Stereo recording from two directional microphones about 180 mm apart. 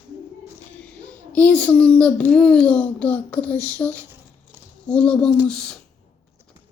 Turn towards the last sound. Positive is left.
turn(degrees=5)  # may be behind; listen again after turning